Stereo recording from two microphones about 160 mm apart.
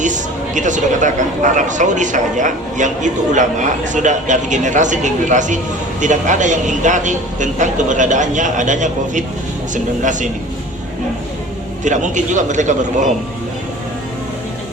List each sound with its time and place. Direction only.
0.0 s speech: 50° right (ahead or behind)
11.8 s speech: 50° right (ahead or behind)